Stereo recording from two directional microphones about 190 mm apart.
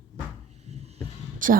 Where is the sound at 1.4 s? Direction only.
45° right (ahead or behind).